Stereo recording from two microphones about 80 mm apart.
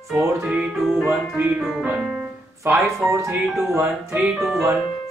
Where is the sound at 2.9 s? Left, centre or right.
Centre.